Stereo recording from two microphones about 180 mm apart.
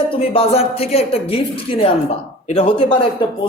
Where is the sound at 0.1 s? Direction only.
35° left (ahead or behind).